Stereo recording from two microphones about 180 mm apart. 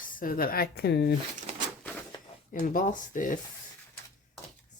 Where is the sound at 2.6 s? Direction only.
50° left (ahead or behind).